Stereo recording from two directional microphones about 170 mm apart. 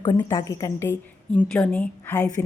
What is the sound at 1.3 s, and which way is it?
Speech, 5° left (ahead or behind).